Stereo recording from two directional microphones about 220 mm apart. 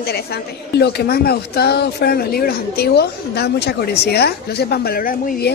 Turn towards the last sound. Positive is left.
turn(degrees=40)  # may be behind; listen again after turning